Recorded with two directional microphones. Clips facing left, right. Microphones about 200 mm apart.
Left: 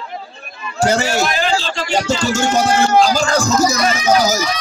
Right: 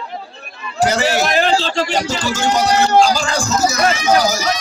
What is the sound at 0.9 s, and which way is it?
A child's voice, 45° left (ahead or behind).